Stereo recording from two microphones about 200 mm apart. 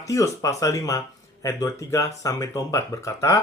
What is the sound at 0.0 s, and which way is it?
Speech, 15° left (ahead or behind).